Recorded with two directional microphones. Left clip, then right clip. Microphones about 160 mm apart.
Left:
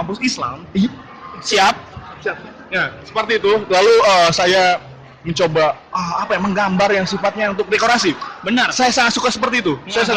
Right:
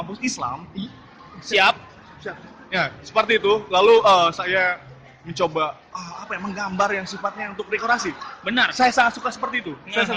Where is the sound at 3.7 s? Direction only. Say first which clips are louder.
Left 3 dB; 50° left (ahead or behind).